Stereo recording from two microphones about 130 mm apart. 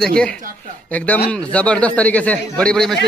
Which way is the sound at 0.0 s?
5° left (ahead or behind).